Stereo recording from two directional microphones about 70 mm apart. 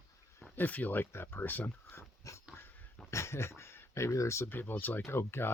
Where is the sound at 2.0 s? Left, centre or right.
Left.